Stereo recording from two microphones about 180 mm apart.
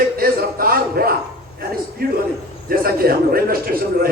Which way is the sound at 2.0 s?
55° right (ahead or behind).